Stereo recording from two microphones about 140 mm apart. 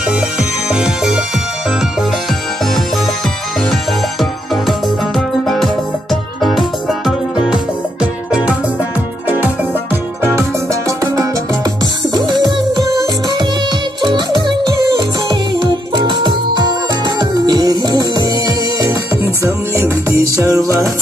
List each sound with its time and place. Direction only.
0.4 s music: 5° right (ahead or behind)
4.2 s music: centre (ahead or behind)
10.3 s music: 20° right (ahead or behind)
19.4 s music: 20° right (ahead or behind)